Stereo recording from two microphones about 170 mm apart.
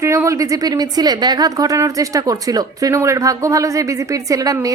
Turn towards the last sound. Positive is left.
turn(degrees=-20)  # may be behind; listen again after turning